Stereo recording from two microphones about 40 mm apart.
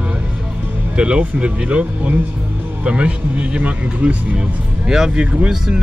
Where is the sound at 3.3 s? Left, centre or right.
Right.